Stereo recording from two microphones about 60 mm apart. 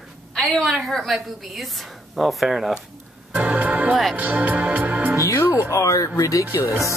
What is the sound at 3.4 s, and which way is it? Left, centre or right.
Music, right.